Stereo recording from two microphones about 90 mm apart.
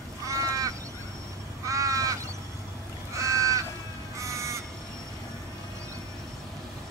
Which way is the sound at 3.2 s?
35° right (ahead or behind).